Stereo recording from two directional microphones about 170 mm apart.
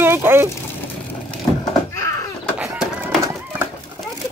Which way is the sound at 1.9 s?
15° left (ahead or behind).